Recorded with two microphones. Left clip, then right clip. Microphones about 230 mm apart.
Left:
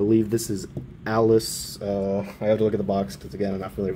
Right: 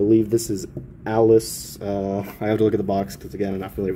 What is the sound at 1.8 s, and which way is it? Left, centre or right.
Speech, right.